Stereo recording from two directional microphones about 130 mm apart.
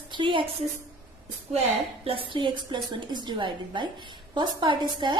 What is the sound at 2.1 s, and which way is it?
A woman's voice, 40° right (ahead or behind).